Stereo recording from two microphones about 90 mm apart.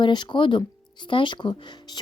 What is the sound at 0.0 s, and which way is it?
Speech, 60° left (ahead or behind).